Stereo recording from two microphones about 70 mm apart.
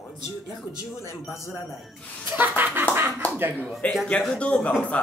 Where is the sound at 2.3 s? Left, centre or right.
Right.